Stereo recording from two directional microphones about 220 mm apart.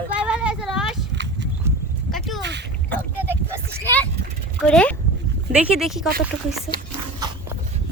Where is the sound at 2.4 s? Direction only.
50° right (ahead or behind).